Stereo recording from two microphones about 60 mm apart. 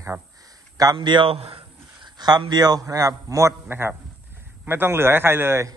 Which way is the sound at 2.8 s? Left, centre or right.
Right.